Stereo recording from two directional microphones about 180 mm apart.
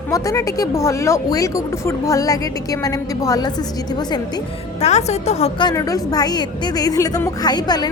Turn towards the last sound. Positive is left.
turn(degrees=25)  # may be behind; listen again after turning